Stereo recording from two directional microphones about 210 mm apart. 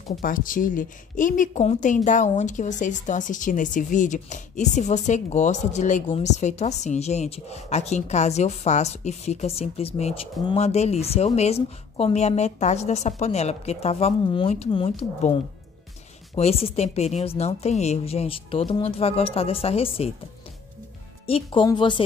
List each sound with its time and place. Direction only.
0.2 s speech: 40° left (ahead or behind)
16.3 s a woman's voice: 30° left (ahead or behind)
21.3 s a woman's voice: 25° left (ahead or behind)